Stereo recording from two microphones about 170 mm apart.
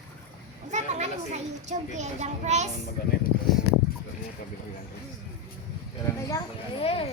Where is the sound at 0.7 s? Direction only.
45° right (ahead or behind).